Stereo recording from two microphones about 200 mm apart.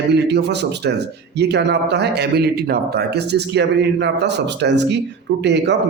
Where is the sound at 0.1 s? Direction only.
60° right (ahead or behind).